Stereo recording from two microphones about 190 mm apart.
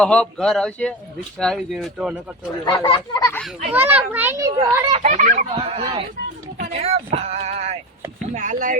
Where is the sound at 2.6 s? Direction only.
25° left (ahead or behind).